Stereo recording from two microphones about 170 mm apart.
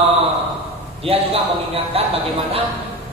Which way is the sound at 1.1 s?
35° right (ahead or behind).